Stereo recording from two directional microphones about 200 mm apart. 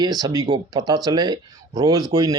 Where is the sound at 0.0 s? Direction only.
20° right (ahead or behind).